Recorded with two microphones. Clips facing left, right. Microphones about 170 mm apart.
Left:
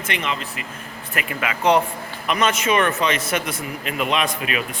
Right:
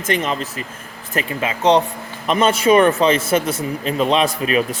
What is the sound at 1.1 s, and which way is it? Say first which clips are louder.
A man's voice: right 4 dB; 30° right (ahead or behind).